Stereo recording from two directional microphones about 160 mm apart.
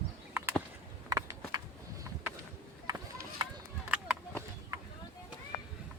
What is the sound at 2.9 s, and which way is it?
Run, 25° right (ahead or behind).